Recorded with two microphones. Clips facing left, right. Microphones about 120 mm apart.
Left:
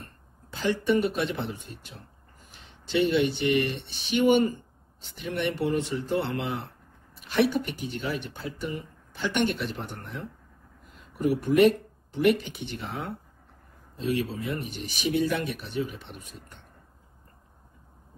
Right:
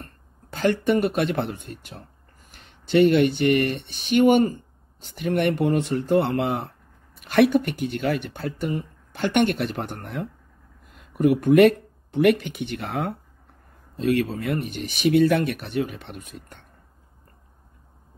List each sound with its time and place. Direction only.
0.5 s speech: 60° right (ahead or behind)